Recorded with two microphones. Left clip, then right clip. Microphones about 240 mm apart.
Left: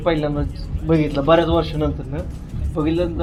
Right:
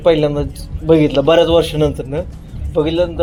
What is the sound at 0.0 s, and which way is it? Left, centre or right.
Speech, right.